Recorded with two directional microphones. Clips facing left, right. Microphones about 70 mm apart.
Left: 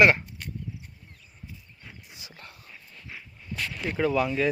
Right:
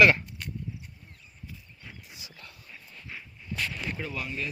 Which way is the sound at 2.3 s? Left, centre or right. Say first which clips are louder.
Left 2 dB; left.